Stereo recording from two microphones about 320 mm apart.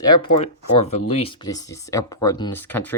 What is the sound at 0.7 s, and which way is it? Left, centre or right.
Speech, left.